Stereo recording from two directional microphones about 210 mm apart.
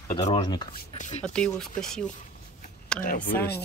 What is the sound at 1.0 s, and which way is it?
Speech, 35° left (ahead or behind).